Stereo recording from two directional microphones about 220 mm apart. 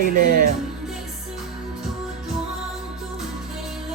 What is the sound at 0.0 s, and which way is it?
Speech, 40° right (ahead or behind).